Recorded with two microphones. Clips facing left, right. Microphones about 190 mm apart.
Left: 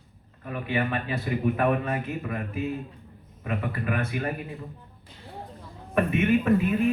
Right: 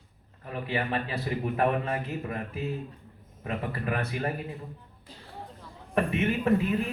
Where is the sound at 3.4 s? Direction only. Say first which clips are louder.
Left 2 dB; 35° right (ahead or behind).